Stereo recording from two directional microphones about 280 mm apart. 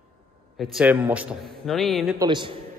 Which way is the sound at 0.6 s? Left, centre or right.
Centre.